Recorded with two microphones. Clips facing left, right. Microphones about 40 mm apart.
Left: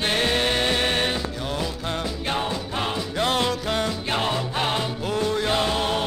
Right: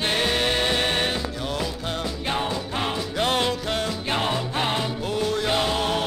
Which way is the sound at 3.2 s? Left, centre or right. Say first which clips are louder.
Even; centre.